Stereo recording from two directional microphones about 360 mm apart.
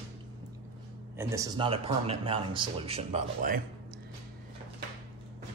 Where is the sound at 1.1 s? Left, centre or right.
Centre.